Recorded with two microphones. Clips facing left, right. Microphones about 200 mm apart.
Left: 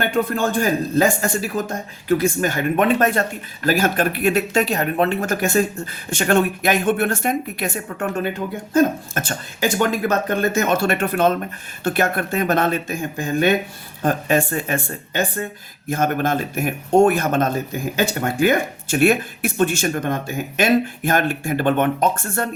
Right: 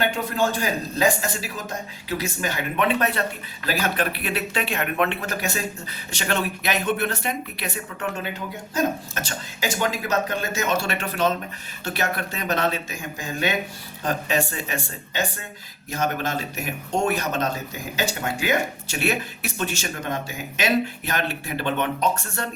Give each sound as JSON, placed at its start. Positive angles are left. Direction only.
{"t": 0.0, "sound": "speech", "side_deg": 55}